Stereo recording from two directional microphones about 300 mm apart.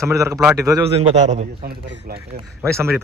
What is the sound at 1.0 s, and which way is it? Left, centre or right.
Speech, right.